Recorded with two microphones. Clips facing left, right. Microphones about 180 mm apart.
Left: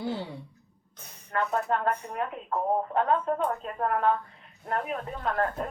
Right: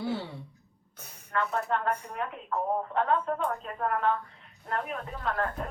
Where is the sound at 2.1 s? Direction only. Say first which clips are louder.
Left 2 dB; 35° left (ahead or behind).